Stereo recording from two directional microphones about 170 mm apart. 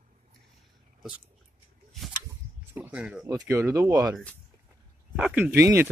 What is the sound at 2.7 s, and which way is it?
Speech, 10° right (ahead or behind).